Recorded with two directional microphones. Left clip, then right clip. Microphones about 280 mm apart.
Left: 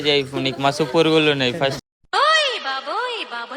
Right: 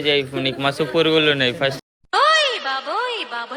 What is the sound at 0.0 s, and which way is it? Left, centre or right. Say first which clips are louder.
A man's voice: even; centre.